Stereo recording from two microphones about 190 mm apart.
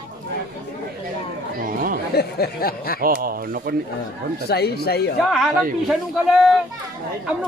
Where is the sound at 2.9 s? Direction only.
50° right (ahead or behind).